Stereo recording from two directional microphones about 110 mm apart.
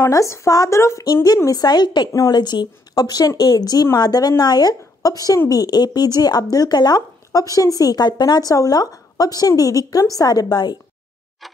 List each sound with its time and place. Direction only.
0.1 s a woman's voice: 25° left (ahead or behind)